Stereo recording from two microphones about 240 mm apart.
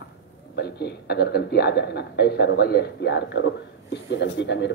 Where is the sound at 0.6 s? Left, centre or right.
Left.